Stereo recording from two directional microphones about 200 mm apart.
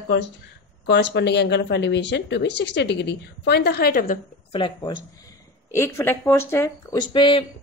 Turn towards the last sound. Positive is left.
turn(degrees=25)  # may be behind; listen again after turning